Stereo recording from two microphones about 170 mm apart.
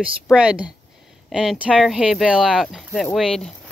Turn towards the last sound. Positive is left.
turn(degrees=5)  # may be behind; listen again after turning